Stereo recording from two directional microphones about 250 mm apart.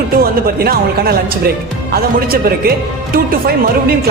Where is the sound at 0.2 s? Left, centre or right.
Right.